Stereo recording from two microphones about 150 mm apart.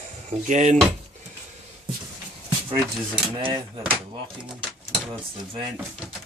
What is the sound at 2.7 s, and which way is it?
Speech, 35° right (ahead or behind).